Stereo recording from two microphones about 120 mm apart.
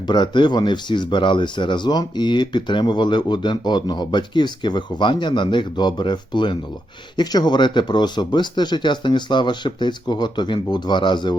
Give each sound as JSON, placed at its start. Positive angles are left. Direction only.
{"t": 0.1, "sound": "speech", "side_deg": 40}